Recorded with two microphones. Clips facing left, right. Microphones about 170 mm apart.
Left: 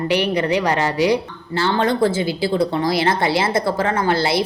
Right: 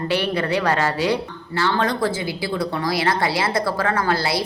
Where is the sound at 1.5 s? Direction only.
25° left (ahead or behind).